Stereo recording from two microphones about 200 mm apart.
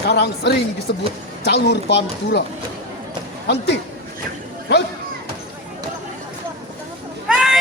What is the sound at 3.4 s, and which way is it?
Speech, 55° left (ahead or behind).